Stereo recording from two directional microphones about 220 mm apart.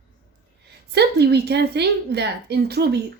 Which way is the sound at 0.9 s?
50° right (ahead or behind).